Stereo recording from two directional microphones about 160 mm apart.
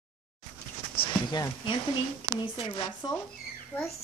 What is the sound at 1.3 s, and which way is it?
Speech, 25° left (ahead or behind).